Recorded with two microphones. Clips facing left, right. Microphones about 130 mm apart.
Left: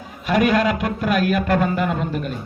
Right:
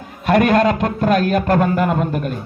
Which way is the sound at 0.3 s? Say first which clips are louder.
Right 4 dB; 50° right (ahead or behind).